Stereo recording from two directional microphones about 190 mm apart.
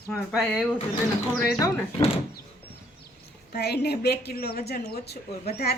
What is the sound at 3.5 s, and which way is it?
Speech, 60° left (ahead or behind).